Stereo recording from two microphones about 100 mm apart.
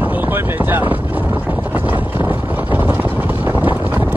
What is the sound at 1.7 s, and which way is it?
Boat, 20° right (ahead or behind).